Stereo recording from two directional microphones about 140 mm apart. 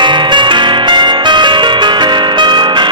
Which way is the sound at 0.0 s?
35° right (ahead or behind).